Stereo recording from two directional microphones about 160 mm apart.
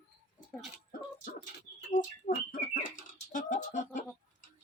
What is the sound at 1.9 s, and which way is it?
Bird, 55° left (ahead or behind).